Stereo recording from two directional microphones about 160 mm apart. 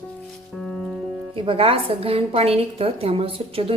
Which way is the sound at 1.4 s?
35° right (ahead or behind).